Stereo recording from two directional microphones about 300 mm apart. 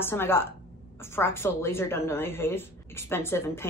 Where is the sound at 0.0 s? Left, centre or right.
Centre.